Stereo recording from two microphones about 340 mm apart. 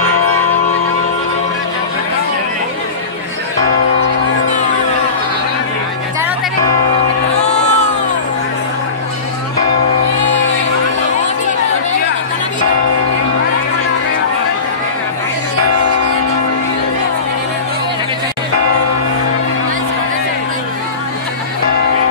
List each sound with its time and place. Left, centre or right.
7.4 s crowd: centre